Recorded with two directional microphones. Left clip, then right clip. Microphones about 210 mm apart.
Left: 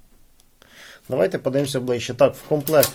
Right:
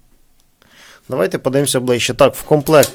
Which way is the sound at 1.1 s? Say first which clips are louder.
Right 4 dB; 25° right (ahead or behind).